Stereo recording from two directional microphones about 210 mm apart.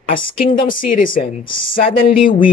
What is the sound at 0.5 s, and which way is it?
Speech, 25° left (ahead or behind).